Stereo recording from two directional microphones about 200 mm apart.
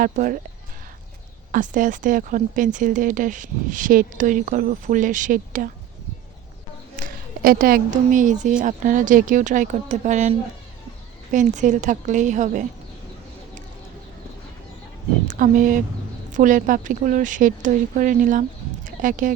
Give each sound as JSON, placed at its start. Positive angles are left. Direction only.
{"t": 0.0, "sound": "speech", "side_deg": -40}
{"t": 1.5, "sound": "speech", "side_deg": -40}
{"t": 6.9, "sound": "speech", "side_deg": -45}
{"t": 15.3, "sound": "speech", "side_deg": -40}